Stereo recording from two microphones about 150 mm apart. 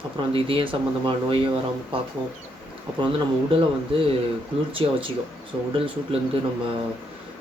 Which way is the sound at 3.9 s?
35° right (ahead or behind).